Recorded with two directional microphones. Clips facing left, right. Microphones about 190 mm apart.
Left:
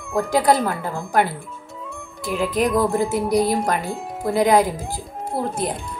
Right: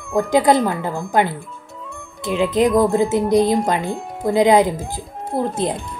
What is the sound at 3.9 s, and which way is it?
Speech, centre (ahead or behind).